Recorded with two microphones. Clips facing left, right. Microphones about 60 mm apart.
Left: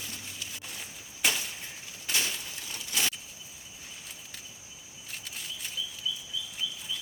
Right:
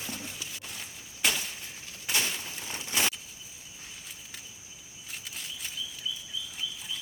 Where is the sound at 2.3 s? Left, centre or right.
Right.